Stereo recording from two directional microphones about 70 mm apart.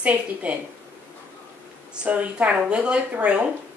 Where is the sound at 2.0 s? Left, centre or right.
Centre.